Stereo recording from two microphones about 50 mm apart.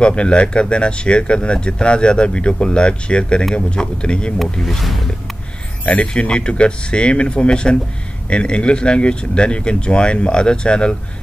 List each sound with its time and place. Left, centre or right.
0.0 s speech: left
4.4 s speech: centre
5.9 s speech: left